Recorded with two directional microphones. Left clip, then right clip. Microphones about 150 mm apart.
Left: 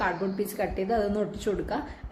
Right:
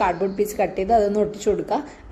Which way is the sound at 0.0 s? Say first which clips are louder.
Right 8 dB; 25° right (ahead or behind).